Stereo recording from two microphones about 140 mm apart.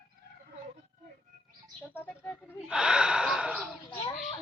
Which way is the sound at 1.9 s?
15° left (ahead or behind).